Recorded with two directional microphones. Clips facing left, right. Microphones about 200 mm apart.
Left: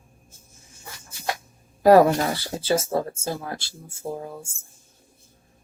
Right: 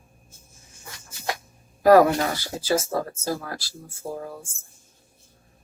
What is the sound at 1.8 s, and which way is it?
Speech, 30° left (ahead or behind).